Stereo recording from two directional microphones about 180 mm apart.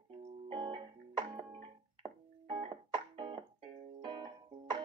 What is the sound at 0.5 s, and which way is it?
Music, 30° right (ahead or behind).